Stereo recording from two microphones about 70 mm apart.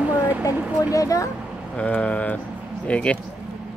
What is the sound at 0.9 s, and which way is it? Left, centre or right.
Speech, left.